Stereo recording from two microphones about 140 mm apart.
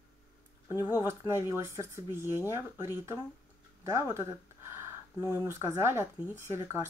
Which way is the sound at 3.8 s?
20° right (ahead or behind).